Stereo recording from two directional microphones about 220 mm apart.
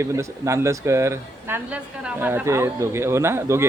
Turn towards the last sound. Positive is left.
turn(degrees=-10)  # may be behind; listen again after turning